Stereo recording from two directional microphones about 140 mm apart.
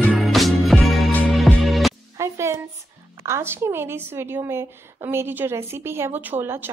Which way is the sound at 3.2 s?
20° right (ahead or behind).